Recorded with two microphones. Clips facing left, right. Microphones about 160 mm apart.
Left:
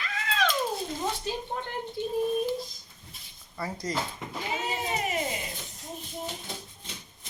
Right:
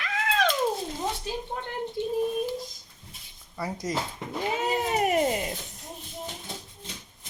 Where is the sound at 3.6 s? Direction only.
20° right (ahead or behind).